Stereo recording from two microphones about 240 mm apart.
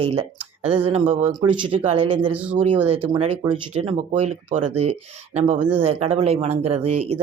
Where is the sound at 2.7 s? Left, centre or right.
Right.